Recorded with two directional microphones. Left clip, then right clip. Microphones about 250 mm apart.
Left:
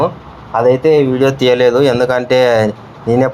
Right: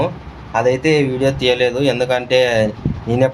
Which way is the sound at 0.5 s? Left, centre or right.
Centre.